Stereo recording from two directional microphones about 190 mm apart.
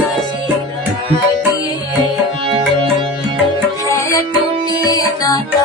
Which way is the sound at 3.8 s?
15° left (ahead or behind).